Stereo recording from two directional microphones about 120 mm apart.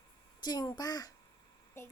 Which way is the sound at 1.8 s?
20° left (ahead or behind).